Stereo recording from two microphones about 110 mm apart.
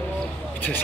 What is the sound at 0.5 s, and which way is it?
Speech, 20° left (ahead or behind).